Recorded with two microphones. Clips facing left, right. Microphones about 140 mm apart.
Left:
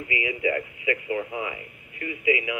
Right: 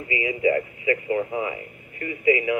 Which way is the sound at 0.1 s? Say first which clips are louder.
Right 5 dB; 30° right (ahead or behind).